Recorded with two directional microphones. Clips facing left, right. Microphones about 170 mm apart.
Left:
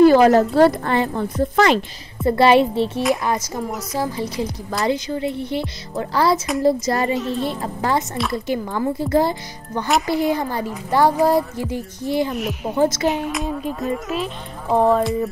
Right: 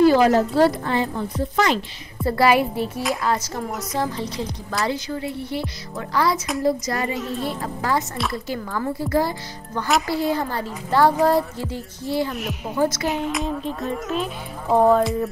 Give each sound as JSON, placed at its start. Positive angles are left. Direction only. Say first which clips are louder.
{"t": 0.0, "sound": "speech", "louder": "left 4 dB", "side_deg": 55}
{"t": 2.2, "sound": "a woman's voice", "louder": "left 4 dB", "side_deg": 25}
{"t": 3.5, "sound": "a woman's voice", "louder": "left 1 dB", "side_deg": 0}
{"t": 12.3, "sound": "speech", "louder": "left 4 dB", "side_deg": 0}
{"t": 12.7, "sound": "a woman's voice", "louder": "left 3 dB", "side_deg": 25}
{"t": 13.0, "sound": "speech", "louder": "left 2 dB", "side_deg": 0}